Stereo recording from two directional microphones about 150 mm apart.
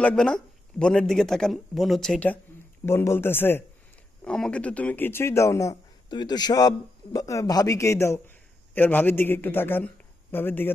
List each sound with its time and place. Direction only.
0.0 s speech: 5° left (ahead or behind)
2.8 s a man's voice: 15° left (ahead or behind)